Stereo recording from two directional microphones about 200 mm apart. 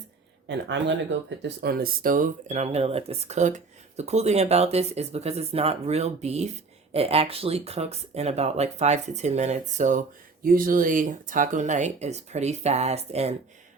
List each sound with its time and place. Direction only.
0.4 s speech: 60° right (ahead or behind)
1.4 s speech: 50° right (ahead or behind); by 13.3 s 30° right (ahead or behind)